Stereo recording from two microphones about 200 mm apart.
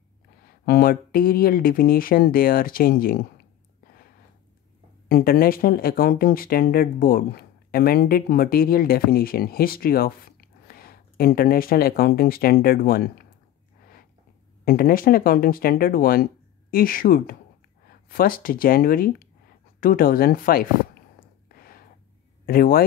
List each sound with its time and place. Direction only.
0.7 s speech: 50° left (ahead or behind)
5.0 s speech: 50° left (ahead or behind)
14.6 s speech: 45° left (ahead or behind)
21.5 s a sound: 50° left (ahead or behind)
22.5 s speech: 45° left (ahead or behind)